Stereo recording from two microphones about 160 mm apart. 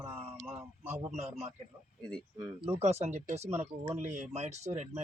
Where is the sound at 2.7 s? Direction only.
45° right (ahead or behind).